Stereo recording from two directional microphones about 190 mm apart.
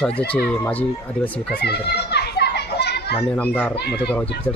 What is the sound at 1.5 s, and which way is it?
Children playing, 60° left (ahead or behind).